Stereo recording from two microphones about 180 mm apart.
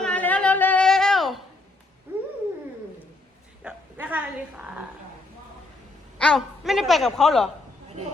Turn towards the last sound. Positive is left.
turn(degrees=0)  # may be behind; listen again after turning